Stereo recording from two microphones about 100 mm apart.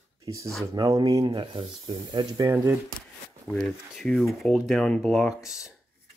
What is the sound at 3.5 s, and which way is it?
Speech, 40° left (ahead or behind).